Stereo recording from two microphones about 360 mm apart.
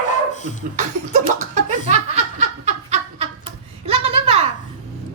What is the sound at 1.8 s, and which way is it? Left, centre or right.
Laughter, centre.